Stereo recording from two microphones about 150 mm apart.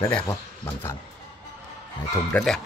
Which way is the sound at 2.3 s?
10° left (ahead or behind).